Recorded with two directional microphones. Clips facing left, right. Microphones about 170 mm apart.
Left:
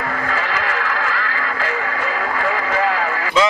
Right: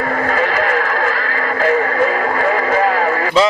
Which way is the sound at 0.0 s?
45° right (ahead or behind).